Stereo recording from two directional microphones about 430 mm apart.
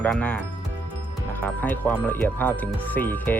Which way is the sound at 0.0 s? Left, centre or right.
Centre.